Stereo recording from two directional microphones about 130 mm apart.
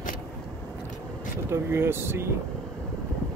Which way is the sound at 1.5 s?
20° right (ahead or behind).